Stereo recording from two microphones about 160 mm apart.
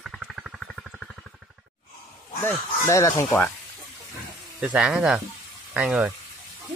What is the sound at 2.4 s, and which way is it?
Speech, 20° left (ahead or behind).